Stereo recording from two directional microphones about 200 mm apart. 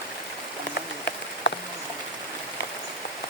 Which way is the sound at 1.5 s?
65° left (ahead or behind).